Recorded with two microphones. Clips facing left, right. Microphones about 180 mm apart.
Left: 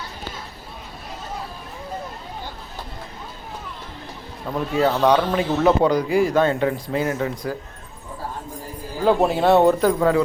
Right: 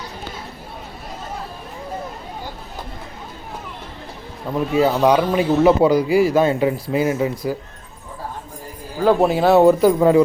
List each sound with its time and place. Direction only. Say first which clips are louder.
4.5 s speech: right 3 dB; 5° right (ahead or behind)
9.0 s speech: right 2 dB; centre (ahead or behind)
10.0 s speech: right 5 dB; 20° right (ahead or behind)